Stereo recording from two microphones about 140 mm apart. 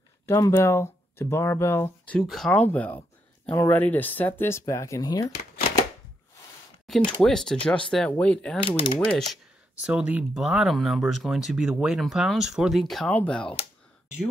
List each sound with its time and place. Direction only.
0.3 s speech: 20° left (ahead or behind)
2.2 s speech: centre (ahead or behind); by 5.3 s 25° left (ahead or behind)
7.2 s speech: 5° left (ahead or behind)
8.6 s speech: 40° left (ahead or behind)
9.8 s speech: 10° right (ahead or behind)